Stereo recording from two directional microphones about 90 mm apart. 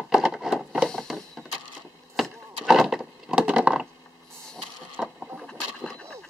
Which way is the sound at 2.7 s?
5° right (ahead or behind).